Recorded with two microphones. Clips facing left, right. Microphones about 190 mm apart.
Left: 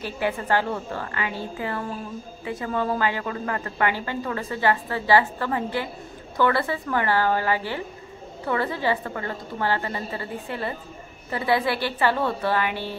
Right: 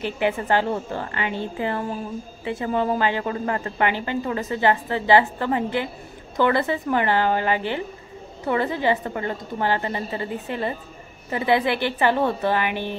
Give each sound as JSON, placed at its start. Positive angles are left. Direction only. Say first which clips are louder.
{"t": 0.0, "sound": "a woman's voice", "louder": "right 3 dB", "side_deg": -20}